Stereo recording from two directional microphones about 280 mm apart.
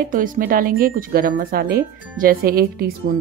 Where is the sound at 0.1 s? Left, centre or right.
Right.